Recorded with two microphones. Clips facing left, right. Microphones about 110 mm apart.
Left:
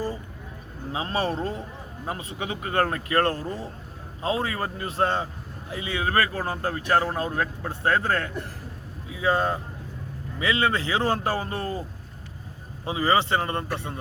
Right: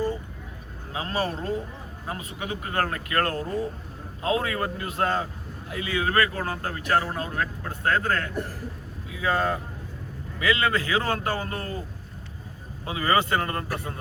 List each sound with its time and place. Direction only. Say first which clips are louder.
0.9 s speech: left 2 dB; 25° left (ahead or behind)
12.8 s speech: left 1 dB; 25° left (ahead or behind)